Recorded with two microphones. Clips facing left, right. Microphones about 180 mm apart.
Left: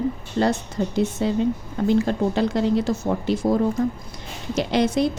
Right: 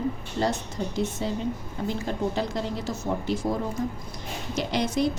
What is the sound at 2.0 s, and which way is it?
Speech, 70° left (ahead or behind).